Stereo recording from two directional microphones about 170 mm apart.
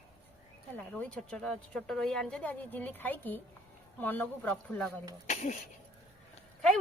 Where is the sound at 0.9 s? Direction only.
5° left (ahead or behind).